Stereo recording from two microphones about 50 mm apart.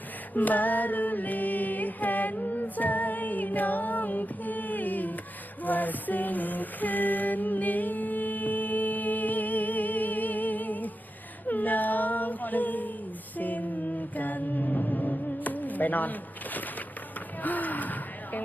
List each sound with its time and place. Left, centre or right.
0.3 s music: left
11.4 s a sound: left
13.3 s music: left
17.4 s gasp: left